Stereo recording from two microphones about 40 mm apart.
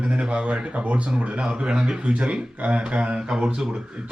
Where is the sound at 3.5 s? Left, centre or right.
Centre.